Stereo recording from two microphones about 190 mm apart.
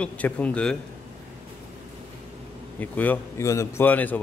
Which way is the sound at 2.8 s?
10° left (ahead or behind).